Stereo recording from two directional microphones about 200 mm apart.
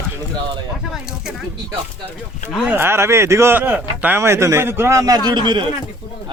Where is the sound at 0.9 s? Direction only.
5° right (ahead or behind).